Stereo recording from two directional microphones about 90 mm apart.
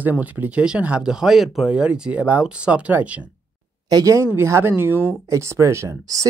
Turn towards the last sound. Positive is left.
turn(degrees=-35)  # may be behind; listen again after turning